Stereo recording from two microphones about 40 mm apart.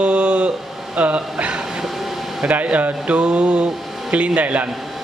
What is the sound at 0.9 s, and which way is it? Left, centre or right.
A man's voice, right.